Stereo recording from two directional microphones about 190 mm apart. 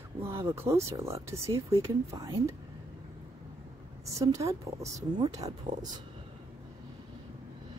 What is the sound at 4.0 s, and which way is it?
A woman's voice, 15° right (ahead or behind).